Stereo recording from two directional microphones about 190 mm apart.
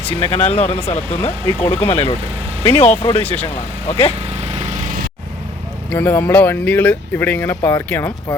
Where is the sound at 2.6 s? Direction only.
30° left (ahead or behind).